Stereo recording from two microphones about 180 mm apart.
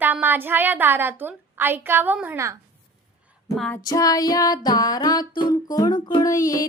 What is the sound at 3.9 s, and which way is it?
Music, 20° left (ahead or behind).